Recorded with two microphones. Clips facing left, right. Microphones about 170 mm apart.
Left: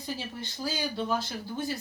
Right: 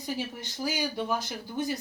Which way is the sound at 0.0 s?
15° right (ahead or behind).